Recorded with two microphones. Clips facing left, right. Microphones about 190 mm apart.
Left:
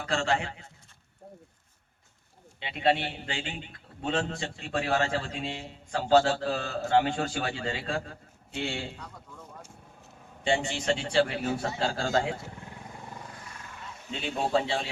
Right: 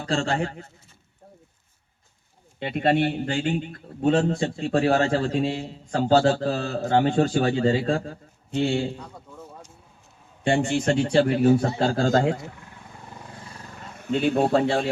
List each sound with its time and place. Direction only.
0.0 s a man's voice: 35° right (ahead or behind)
2.6 s a man's voice: 50° right (ahead or behind)
10.4 s a man's voice: 55° right (ahead or behind)
13.4 s a sound: 35° right (ahead or behind); by 14.8 s 55° right (ahead or behind)